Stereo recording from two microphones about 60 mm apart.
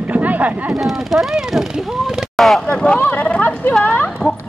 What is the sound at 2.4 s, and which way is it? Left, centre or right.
Speech, centre.